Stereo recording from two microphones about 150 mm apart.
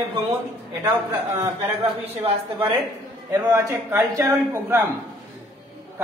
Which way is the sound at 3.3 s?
20° right (ahead or behind).